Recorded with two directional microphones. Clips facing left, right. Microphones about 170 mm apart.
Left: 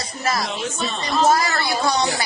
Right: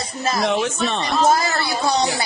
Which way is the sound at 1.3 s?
25° right (ahead or behind).